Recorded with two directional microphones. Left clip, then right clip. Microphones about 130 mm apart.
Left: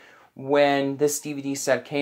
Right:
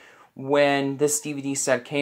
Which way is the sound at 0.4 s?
10° left (ahead or behind).